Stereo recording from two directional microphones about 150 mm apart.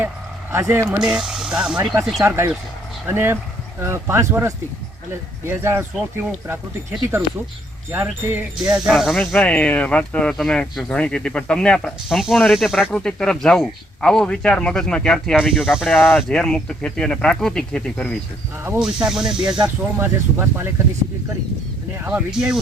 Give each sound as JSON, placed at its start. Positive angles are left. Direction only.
{"t": 0.5, "sound": "speech", "side_deg": -20}
{"t": 0.9, "sound": "speech", "side_deg": -5}
{"t": 2.1, "sound": "speech", "side_deg": -15}
{"t": 7.9, "sound": "speech", "side_deg": -15}
{"t": 8.7, "sound": "speech", "side_deg": 0}
{"t": 9.1, "sound": "speech", "side_deg": 10}
{"t": 15.9, "sound": "speech", "side_deg": 10}
{"t": 18.8, "sound": "speech", "side_deg": -5}
{"t": 19.6, "sound": "speech", "side_deg": -15}
{"t": 22.0, "sound": "speech", "side_deg": -10}